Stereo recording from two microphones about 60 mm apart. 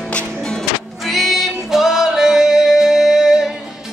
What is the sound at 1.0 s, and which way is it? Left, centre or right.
Music, centre.